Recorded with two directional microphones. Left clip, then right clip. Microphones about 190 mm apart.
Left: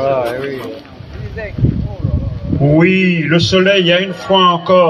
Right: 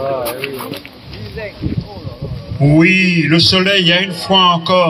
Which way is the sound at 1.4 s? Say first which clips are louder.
Left 1 dB; 45° right (ahead or behind).